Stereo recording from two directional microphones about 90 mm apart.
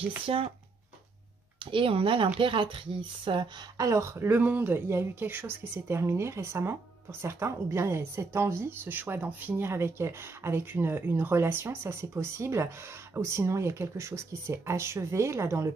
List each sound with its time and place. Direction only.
0.3 s speech: 90° right
1.6 s speech: 70° right (ahead or behind)
3.7 s speech: 35° right (ahead or behind)